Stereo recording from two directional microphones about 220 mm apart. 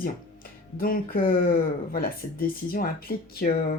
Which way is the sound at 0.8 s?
40° left (ahead or behind).